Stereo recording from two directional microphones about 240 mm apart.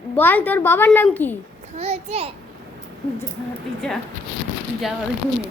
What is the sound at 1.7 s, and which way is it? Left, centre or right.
Speech, right.